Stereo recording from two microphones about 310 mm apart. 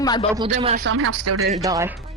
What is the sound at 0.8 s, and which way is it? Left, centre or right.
Speech, right.